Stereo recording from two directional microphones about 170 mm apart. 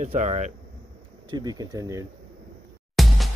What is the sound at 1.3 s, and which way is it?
Speech, 25° right (ahead or behind).